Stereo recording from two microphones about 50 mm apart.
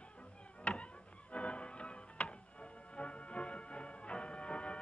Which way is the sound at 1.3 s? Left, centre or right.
Left.